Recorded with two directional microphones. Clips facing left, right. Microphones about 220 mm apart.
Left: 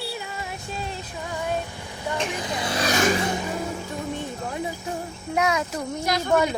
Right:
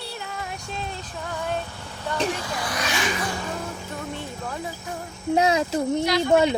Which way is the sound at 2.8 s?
40° left (ahead or behind).